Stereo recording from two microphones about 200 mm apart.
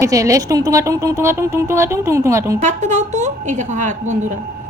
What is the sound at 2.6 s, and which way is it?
A woman's voice, 35° right (ahead or behind).